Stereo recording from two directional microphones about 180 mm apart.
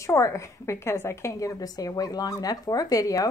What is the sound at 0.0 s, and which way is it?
A woman's voice, 15° left (ahead or behind).